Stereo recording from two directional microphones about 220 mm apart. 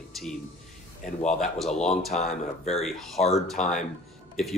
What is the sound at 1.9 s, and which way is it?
Speech, 30° left (ahead or behind).